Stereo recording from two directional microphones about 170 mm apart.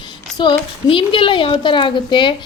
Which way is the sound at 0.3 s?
25° left (ahead or behind).